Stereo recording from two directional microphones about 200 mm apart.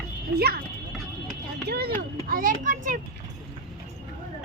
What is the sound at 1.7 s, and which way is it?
A child's voice, 50° right (ahead or behind).